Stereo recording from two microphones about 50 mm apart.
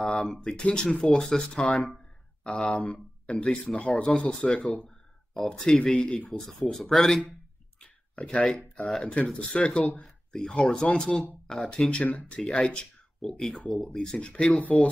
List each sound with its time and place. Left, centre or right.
0.0 s speech: centre
2.8 s speech: left
3.6 s speech: centre
7.8 s a sound: left
8.7 s speech: centre
9.0 s speech: left
10.0 s a sound: centre
10.6 s speech: centre
12.0 s speech: left
12.5 s speech: centre
13.9 s speech: left